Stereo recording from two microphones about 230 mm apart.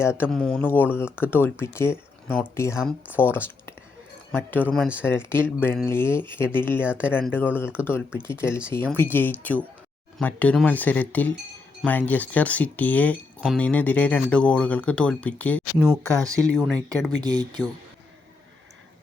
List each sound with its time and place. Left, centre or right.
0.2 s speech: centre
5.0 s speech: centre
17.2 s speech: centre